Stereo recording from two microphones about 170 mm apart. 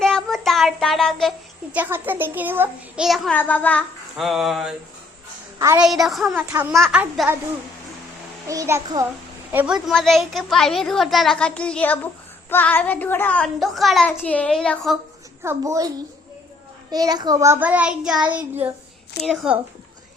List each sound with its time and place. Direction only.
0.0 s child singing: 5° left (ahead or behind)
1.7 s a child's voice: 10° right (ahead or behind)
5.5 s a woman's voice: 20° right (ahead or behind)
5.8 s a child's voice: centre (ahead or behind)
6.5 s a child's voice: 10° right (ahead or behind)
6.7 s a child's voice: centre (ahead or behind)
7.0 s a child's voice: 10° right (ahead or behind)
8.4 s a child's voice: 15° right (ahead or behind); by 14.1 s centre (ahead or behind)
14.1 s a woman's voice: 10° left (ahead or behind)
15.4 s a child's voice: 20° right (ahead or behind)
16.9 s a child's voice: 25° right (ahead or behind); by 19.5 s centre (ahead or behind)